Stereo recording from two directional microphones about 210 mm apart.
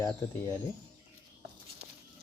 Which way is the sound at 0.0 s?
15° left (ahead or behind).